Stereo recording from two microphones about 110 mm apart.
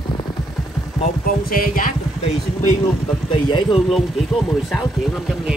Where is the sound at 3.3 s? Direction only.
50° left (ahead or behind).